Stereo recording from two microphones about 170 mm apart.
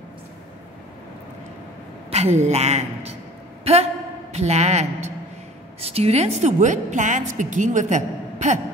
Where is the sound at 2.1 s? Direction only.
40° right (ahead or behind).